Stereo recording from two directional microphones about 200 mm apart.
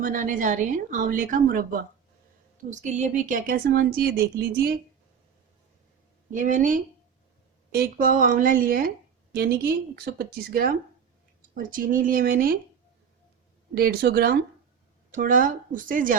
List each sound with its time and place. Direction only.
0.0 s a woman's voice: 40° right (ahead or behind)
6.3 s a woman's voice: 40° right (ahead or behind)
13.7 s speech: 50° right (ahead or behind)